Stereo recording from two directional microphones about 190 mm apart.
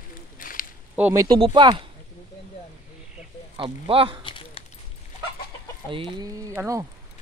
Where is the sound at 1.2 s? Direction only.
25° right (ahead or behind).